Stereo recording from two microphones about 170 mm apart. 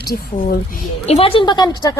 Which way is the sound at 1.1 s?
35° left (ahead or behind).